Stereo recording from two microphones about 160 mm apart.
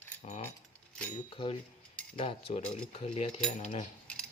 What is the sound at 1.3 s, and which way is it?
Speech, 30° left (ahead or behind).